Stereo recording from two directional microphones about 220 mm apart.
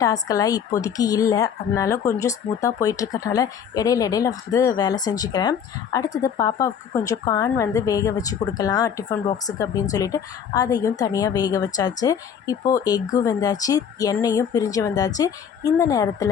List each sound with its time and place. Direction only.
0.0 s a woman's voice: 15° left (ahead or behind)